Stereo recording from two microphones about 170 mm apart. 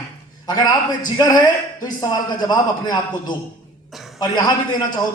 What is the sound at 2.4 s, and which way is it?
Speech, 25° left (ahead or behind).